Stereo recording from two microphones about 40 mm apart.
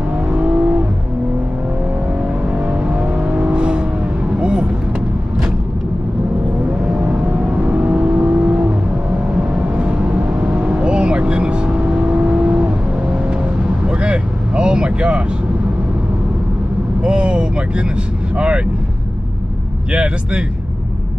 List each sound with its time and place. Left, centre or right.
0.3 s vehicle: right
2.2 s vehicle: right
6.9 s vehicle: right
17.0 s vehicle: right
19.9 s vehicle: right